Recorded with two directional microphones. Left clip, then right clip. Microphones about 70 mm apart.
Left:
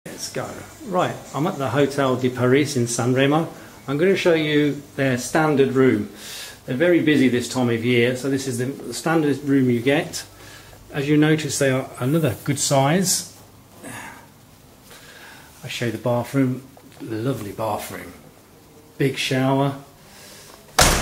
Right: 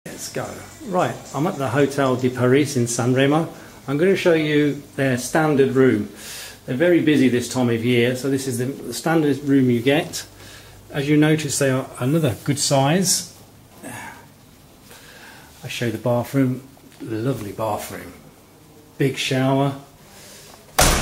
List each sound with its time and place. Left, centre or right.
0.0 s speech: centre
13.8 s a sound: centre
15.6 s speech: centre
16.0 s speech: centre
18.9 s speech: centre
20.7 s a sound: left